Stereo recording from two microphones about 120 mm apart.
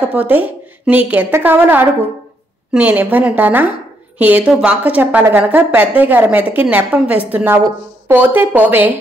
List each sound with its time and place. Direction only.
0.1 s a woman's voice: 15° right (ahead or behind)